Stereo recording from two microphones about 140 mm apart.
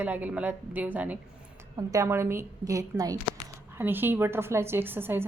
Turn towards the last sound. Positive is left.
turn(degrees=-15)  # may be behind; listen again after turning